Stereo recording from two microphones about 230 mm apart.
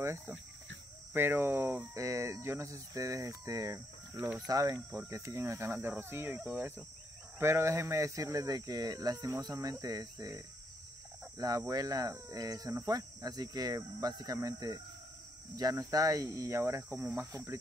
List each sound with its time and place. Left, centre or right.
0.0 s speech: centre